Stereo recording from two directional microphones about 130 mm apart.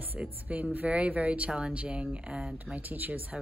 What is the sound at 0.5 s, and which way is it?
Speech, 10° right (ahead or behind).